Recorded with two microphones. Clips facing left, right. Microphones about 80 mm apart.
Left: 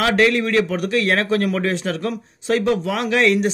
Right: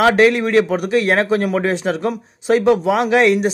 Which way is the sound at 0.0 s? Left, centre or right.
Right.